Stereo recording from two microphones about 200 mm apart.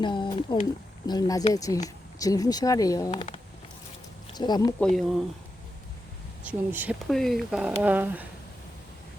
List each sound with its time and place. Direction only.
0.0 s speech: 25° left (ahead or behind)
3.1 s speech: 25° left (ahead or behind)
4.4 s speech: 20° left (ahead or behind)
4.8 s speech: centre (ahead or behind)
6.4 s speech: 10° right (ahead or behind)